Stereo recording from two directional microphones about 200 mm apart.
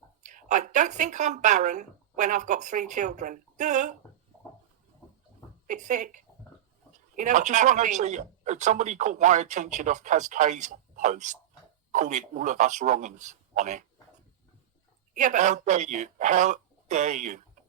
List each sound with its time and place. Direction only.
0.2 s speech: 40° right (ahead or behind)
5.6 s speech: 40° right (ahead or behind)
15.1 s speech: 40° right (ahead or behind)